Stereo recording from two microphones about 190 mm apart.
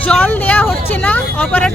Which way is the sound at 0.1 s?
10° left (ahead or behind).